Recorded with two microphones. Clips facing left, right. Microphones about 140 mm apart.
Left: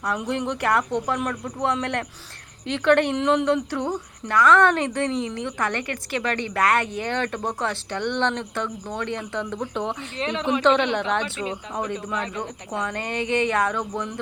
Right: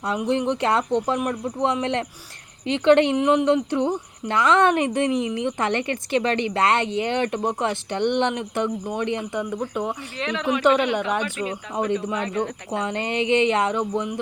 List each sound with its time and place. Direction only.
0.0 s a woman's voice: 20° right (ahead or behind)
10.2 s a woman's voice: 30° left (ahead or behind)
10.6 s a woman's voice: 10° right (ahead or behind)
12.0 s a woman's voice: 20° right (ahead or behind)